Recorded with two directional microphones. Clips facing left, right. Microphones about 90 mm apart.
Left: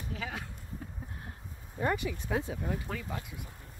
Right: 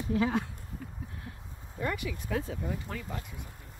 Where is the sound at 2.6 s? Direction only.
Centre (ahead or behind).